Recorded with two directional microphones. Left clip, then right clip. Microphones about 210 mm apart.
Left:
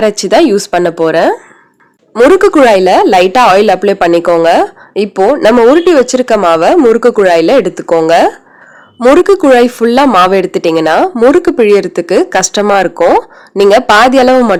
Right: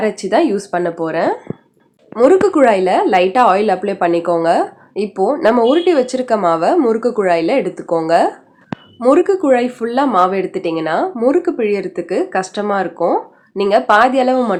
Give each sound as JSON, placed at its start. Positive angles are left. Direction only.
{"t": 0.0, "sound": "a woman's voice", "side_deg": 45}